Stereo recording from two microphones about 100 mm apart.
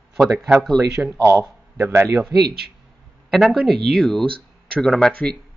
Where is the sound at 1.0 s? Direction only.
10° right (ahead or behind).